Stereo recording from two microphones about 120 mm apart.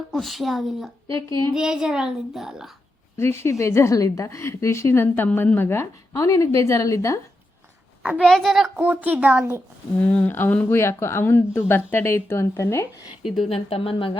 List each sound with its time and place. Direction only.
0.1 s a child's voice: centre (ahead or behind)
1.0 s a sound: 45° right (ahead or behind)
1.5 s a child's voice: 5° right (ahead or behind)
3.2 s a woman's voice: 20° left (ahead or behind)
8.2 s a child's voice: 5° left (ahead or behind)
8.7 s speech: 15° right (ahead or behind)
10.0 s a woman's voice: 15° left (ahead or behind)
13.1 s a child's voice: centre (ahead or behind)
13.5 s speech: 55° left (ahead or behind)